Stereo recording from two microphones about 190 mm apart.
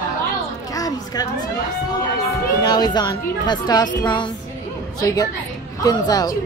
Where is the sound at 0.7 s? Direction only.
20° left (ahead or behind).